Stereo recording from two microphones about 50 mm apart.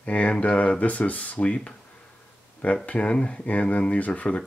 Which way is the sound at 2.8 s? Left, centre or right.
Left.